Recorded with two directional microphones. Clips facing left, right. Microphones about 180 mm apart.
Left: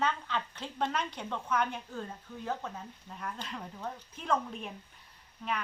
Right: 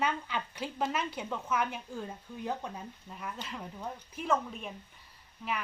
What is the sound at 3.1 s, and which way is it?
Speech, 5° right (ahead or behind).